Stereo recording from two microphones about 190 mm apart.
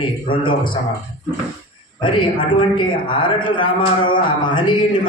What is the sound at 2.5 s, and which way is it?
A man's voice, 25° left (ahead or behind).